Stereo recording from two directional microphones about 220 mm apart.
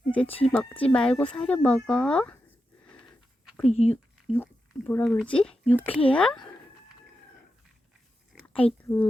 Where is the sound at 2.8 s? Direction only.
5° left (ahead or behind).